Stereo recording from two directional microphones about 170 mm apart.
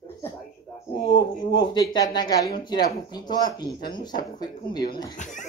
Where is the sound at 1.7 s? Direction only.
25° left (ahead or behind).